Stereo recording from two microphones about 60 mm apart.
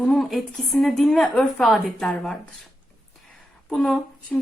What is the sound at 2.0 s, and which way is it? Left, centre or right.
Speech, centre.